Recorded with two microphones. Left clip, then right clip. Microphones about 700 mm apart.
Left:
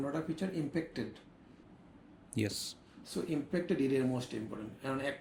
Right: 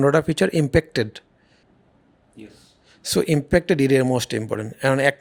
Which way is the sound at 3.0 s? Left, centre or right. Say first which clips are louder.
Right 17 dB; right.